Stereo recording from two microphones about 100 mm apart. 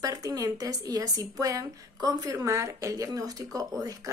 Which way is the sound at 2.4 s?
30° right (ahead or behind).